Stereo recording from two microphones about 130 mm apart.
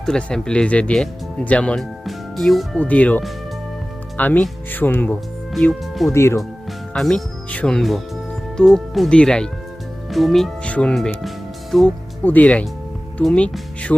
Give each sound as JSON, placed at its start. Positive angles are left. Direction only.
{"t": 0.0, "sound": "speech", "side_deg": 5}
{"t": 5.5, "sound": "speech", "side_deg": 0}
{"t": 6.1, "sound": "speech", "side_deg": 20}
{"t": 6.9, "sound": "speech", "side_deg": 5}